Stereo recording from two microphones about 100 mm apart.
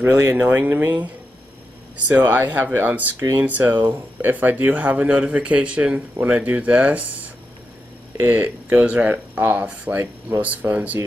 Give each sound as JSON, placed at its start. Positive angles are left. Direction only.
{"t": 0.0, "sound": "speech", "side_deg": -25}
{"t": 2.0, "sound": "speech", "side_deg": -20}
{"t": 3.4, "sound": "speech", "side_deg": -15}
{"t": 8.2, "sound": "speech", "side_deg": -15}